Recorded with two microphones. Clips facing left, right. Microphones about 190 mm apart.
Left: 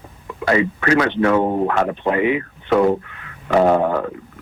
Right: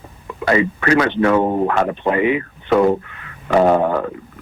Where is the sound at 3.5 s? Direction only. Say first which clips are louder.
Right 1 dB; 20° right (ahead or behind).